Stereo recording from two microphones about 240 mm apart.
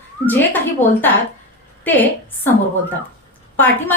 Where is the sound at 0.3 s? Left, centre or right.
Centre.